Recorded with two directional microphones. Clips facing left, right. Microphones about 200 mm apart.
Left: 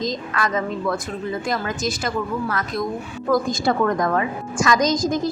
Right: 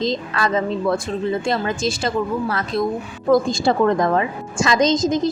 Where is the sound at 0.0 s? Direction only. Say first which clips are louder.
Right 3 dB; 30° right (ahead or behind).